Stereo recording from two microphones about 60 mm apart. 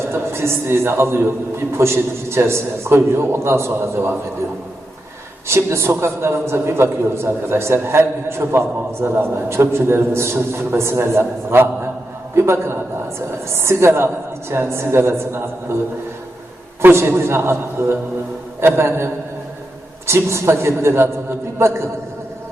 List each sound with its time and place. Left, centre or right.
0.1 s a man's voice: right
5.5 s a man's voice: right